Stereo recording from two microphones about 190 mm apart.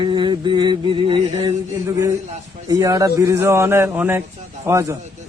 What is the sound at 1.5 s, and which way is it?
A man's voice, 15° right (ahead or behind).